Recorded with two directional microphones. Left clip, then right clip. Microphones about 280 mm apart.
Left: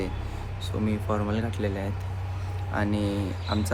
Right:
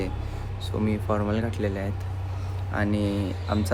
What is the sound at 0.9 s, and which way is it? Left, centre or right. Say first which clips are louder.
Speech: right 2 dB; centre.